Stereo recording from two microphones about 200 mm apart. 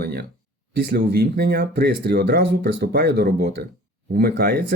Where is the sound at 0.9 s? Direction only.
50° right (ahead or behind).